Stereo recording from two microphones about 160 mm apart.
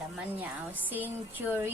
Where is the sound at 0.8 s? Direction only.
10° right (ahead or behind).